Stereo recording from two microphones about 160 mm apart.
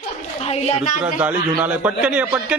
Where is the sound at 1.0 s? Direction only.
10° right (ahead or behind).